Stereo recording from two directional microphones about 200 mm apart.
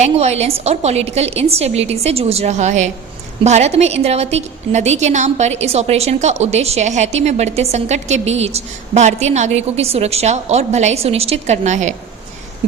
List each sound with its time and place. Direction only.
0.0 s a woman's voice: 30° right (ahead or behind)